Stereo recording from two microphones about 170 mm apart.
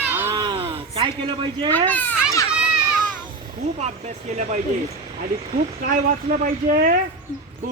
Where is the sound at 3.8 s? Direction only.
40° right (ahead or behind).